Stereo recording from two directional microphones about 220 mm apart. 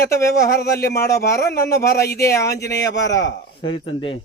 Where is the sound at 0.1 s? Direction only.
15° left (ahead or behind).